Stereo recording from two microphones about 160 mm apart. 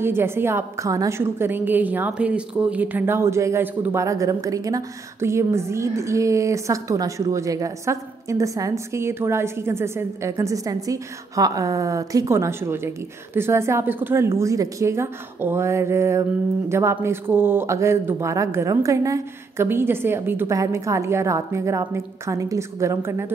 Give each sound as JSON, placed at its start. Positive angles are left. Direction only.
{"t": 0.0, "sound": "a woman's voice", "side_deg": -15}